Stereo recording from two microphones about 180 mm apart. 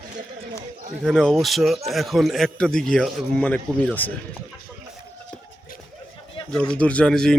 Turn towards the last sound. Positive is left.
turn(degrees=5)  # may be behind; listen again after turning